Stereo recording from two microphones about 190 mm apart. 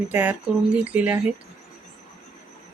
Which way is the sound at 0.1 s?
5° right (ahead or behind).